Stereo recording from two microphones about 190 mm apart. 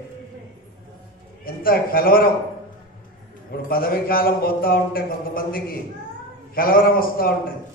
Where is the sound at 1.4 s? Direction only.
50° left (ahead or behind).